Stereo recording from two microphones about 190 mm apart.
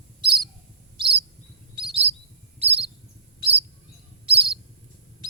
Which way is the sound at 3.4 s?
30° right (ahead or behind).